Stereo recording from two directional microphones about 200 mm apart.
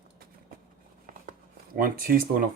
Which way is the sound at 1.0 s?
40° right (ahead or behind).